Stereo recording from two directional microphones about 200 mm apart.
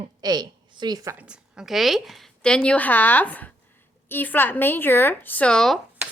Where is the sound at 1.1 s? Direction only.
5° right (ahead or behind).